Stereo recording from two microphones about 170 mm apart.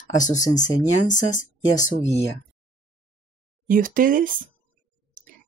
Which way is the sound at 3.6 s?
55° right (ahead or behind).